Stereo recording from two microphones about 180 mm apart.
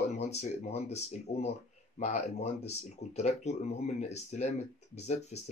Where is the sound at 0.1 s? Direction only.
35° left (ahead or behind).